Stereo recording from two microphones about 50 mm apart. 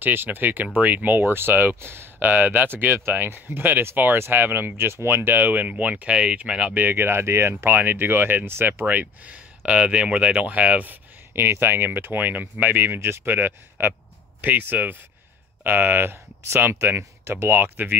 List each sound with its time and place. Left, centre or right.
0.0 s speech: right
5.1 s speech: right; by 6.7 s centre
6.7 s speech: right
7.7 s speech: right
8.8 s speech: right
11.3 s speech: right
13.0 s speech: right